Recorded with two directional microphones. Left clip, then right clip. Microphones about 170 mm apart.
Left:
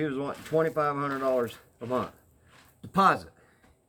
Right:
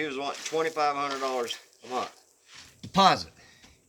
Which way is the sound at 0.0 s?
15° right (ahead or behind).